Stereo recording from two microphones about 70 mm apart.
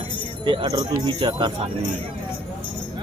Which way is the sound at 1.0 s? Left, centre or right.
Right.